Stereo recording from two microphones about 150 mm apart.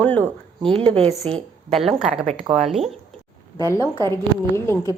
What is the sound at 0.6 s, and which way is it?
Speech, 40° right (ahead or behind).